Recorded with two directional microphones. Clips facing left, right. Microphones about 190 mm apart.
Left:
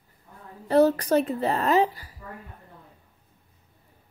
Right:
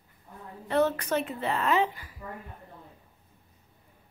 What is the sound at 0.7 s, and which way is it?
A woman's voice, 35° left (ahead or behind).